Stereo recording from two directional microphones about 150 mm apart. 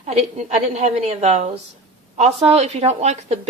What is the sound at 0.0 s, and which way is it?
Speech, 45° right (ahead or behind).